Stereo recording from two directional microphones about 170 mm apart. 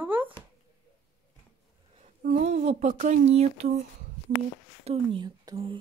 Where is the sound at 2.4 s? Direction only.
40° right (ahead or behind).